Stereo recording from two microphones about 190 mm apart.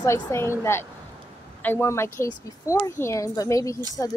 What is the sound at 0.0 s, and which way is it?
A woman's voice, 15° left (ahead or behind).